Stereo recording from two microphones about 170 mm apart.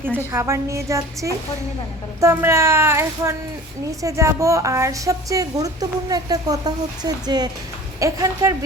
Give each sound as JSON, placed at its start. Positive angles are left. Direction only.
{"t": 0.3, "sound": "a woman's voice", "side_deg": -15}